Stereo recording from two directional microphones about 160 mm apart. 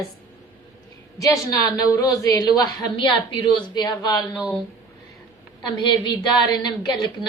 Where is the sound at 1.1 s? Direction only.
20° left (ahead or behind).